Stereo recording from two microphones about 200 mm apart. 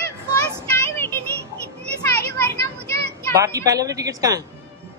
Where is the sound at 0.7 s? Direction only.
10° left (ahead or behind).